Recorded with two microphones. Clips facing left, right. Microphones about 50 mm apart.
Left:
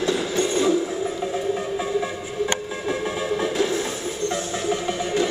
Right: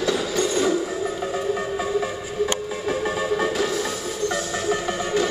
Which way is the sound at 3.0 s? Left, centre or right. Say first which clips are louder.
Right 2 dB; right.